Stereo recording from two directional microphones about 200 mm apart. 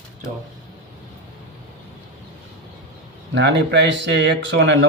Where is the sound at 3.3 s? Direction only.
60° right (ahead or behind).